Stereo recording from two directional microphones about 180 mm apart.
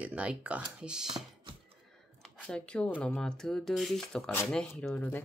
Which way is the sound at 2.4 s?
5° left (ahead or behind).